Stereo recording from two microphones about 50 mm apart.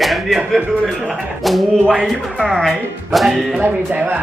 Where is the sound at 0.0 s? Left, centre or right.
Centre.